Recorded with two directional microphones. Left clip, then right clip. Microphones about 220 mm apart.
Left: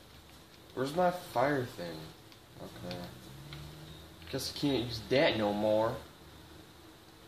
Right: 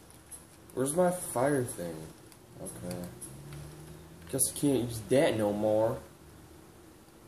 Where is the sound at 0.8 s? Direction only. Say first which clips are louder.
Right 2 dB; 15° right (ahead or behind).